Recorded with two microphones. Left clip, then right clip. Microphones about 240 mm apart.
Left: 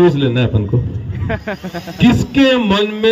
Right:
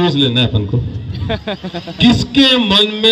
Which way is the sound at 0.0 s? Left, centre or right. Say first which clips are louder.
Left 1 dB; left.